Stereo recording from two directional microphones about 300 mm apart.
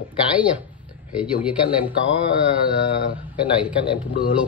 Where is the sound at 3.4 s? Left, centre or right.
Centre.